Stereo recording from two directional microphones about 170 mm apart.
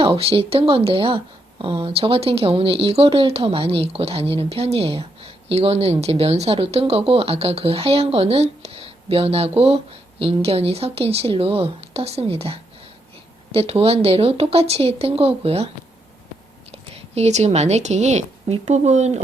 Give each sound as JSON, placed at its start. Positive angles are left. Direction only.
{"t": 0.0, "sound": "speech", "side_deg": -35}
{"t": 16.7, "sound": "speech", "side_deg": -40}